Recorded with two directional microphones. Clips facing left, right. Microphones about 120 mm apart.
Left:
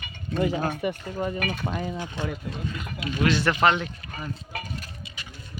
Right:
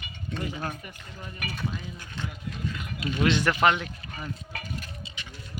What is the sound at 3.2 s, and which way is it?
Speech, 20° right (ahead or behind).